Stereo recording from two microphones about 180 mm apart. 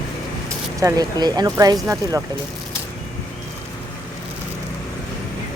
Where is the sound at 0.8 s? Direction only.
20° right (ahead or behind).